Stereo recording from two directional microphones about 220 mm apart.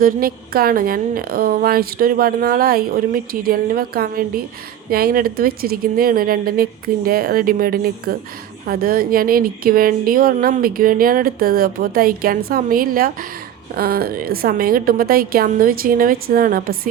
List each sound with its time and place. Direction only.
0.0 s a woman's voice: 40° right (ahead or behind)